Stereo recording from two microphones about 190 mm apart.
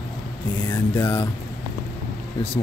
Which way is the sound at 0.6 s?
10° left (ahead or behind).